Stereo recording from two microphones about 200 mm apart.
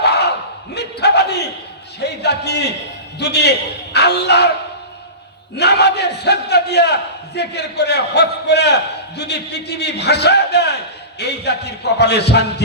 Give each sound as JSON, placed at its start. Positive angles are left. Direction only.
{"t": 0.0, "sound": "battle cry", "side_deg": 55}
{"t": 2.0, "sound": "a sound", "side_deg": 55}
{"t": 3.2, "sound": "a man's voice", "side_deg": 55}
{"t": 5.5, "sound": "a man's voice", "side_deg": 55}